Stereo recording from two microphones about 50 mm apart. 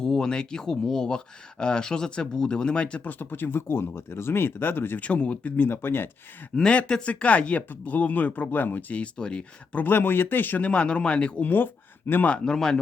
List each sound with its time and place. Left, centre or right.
0.0 s speech: centre
3.0 s speech: left
4.9 s a man's voice: left
5.5 s speech: left
6.7 s a man's voice: left
9.7 s speech: left
10.6 s a man's voice: left
11.4 s speech: left
12.5 s speech: centre